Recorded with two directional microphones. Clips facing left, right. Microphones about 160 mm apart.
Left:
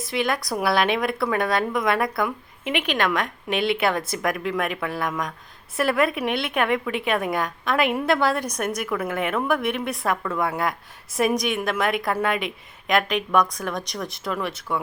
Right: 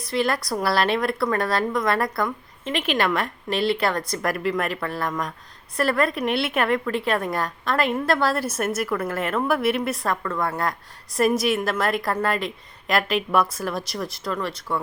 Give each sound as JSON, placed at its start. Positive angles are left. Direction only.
{"t": 0.0, "sound": "a woman's voice", "side_deg": 0}